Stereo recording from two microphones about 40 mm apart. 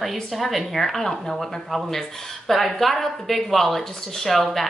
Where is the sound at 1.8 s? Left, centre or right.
Centre.